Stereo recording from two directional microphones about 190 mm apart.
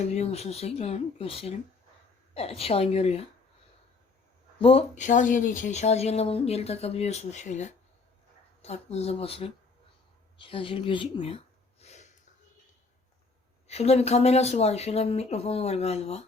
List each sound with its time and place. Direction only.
0.0 s speech: 35° left (ahead or behind)
4.6 s speech: 30° left (ahead or behind)
10.3 s a sound: 25° left (ahead or behind)
13.7 s speech: 35° left (ahead or behind)